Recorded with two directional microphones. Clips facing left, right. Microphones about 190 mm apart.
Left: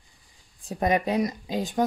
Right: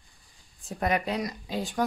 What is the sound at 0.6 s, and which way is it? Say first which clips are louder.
Speech: left 4 dB; 20° left (ahead or behind).